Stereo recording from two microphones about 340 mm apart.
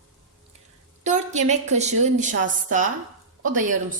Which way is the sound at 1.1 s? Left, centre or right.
Right.